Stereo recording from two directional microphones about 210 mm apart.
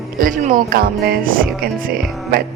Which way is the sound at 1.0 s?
45° right (ahead or behind).